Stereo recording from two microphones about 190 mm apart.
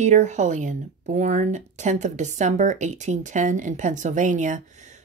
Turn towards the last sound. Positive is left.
turn(degrees=-40)  # may be behind; listen again after turning